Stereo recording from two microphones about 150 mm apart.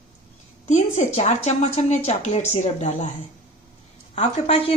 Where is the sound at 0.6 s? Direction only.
50° left (ahead or behind).